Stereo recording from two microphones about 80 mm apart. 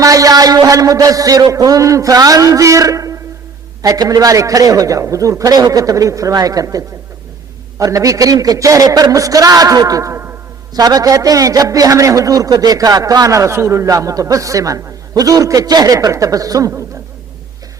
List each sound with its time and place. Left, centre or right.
0.0 s a man's voice: right
3.8 s a man's voice: right
7.9 s a man's voice: right